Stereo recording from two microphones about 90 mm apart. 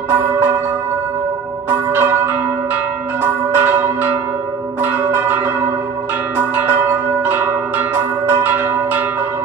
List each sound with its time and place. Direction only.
0.1 s church bell: 25° right (ahead or behind)
1.7 s church bell: 25° right (ahead or behind)
6.3 s bell: 20° right (ahead or behind)